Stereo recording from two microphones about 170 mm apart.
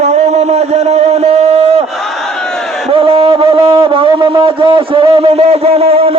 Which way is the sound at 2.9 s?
35° right (ahead or behind).